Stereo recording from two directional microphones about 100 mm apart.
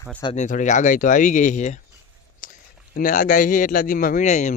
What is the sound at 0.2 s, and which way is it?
Speech, 45° left (ahead or behind).